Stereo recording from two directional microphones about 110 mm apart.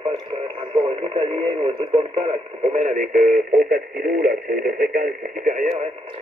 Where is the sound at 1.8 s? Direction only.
55° right (ahead or behind); by 3.0 s 70° right (ahead or behind).